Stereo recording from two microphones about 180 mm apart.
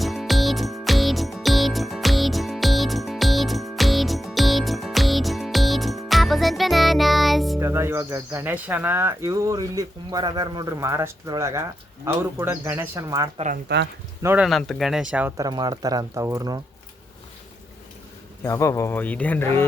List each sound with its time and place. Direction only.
0.0 s music: centre (ahead or behind)
7.6 s speech: 15° right (ahead or behind)
13.3 s speech: 40° right (ahead or behind)
14.2 s speech: 15° right (ahead or behind)
14.4 s speech: centre (ahead or behind)
15.4 s speech: 20° right (ahead or behind)
18.4 s speech: 15° left (ahead or behind)